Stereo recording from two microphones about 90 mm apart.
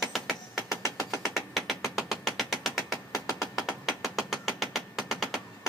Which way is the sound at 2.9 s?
40° left (ahead or behind).